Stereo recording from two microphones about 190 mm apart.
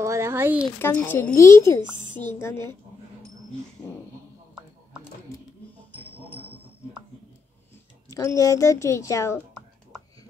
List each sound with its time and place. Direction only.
0.0 s speech: 15° right (ahead or behind)
0.7 s a woman's voice: 10° left (ahead or behind)
8.1 s a woman's voice: 15° left (ahead or behind)